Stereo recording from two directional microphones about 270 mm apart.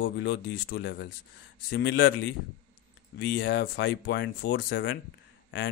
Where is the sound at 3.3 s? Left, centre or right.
Left.